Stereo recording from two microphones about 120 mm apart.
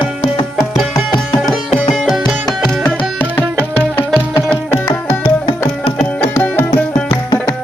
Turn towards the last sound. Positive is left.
turn(degrees=15)  # may be behind; listen again after turning